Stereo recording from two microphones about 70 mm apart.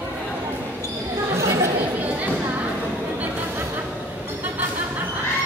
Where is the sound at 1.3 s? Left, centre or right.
Right.